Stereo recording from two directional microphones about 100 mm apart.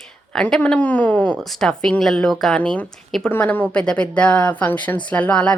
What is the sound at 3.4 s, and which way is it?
Speech, 15° left (ahead or behind).